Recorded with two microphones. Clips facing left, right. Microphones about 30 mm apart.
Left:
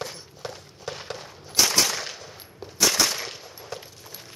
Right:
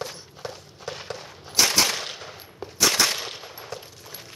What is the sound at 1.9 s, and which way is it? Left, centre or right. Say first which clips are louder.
Gunshot: right 2 dB; right.